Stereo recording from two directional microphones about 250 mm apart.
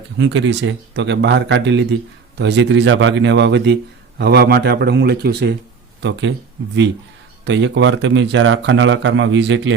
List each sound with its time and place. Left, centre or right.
0.2 s a man's voice: right
7.4 s speech: right